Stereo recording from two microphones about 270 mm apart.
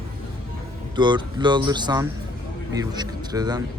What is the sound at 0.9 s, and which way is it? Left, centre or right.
Speech, centre.